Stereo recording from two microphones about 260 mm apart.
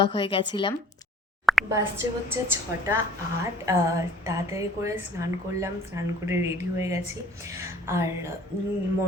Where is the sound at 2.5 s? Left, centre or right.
Centre.